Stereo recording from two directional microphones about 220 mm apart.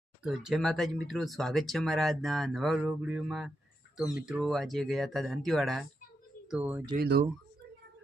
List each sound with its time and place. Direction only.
0.2 s speech: centre (ahead or behind)
6.9 s speech: 40° right (ahead or behind)